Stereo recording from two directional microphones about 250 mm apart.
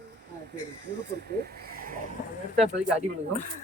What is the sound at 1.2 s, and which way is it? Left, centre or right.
Speech, right.